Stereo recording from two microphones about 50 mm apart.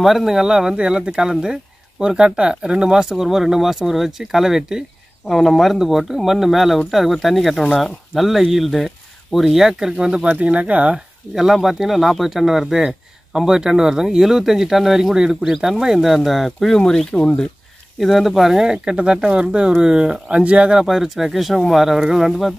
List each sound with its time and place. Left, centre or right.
0.0 s speech: centre
5.3 s speech: centre
10.3 s speech: right
11.3 s speech: centre
12.7 s a sound: centre
13.5 s speech: centre
20.7 s speech: centre